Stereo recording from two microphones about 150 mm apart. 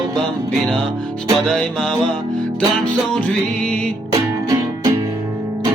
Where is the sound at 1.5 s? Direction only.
5° left (ahead or behind).